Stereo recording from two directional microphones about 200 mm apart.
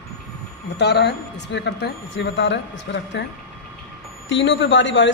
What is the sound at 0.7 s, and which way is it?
Speech, 55° left (ahead or behind).